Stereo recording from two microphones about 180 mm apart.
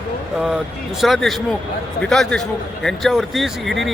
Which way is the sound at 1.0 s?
Centre (ahead or behind).